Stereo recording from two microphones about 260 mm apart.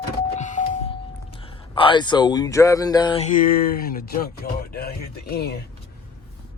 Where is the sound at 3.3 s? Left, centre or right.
Left.